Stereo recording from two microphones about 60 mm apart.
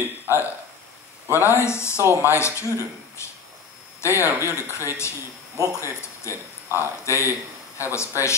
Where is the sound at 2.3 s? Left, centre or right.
Left.